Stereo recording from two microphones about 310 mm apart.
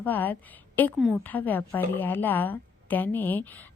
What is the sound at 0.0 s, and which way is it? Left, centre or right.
A woman's voice, centre.